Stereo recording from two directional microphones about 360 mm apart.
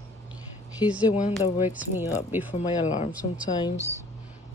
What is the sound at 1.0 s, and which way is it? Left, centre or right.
Speech, centre.